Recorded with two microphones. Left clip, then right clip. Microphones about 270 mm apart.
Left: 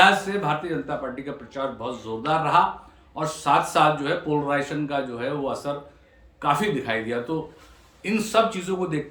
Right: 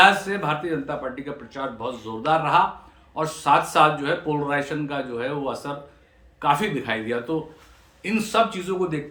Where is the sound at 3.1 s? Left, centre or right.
Centre.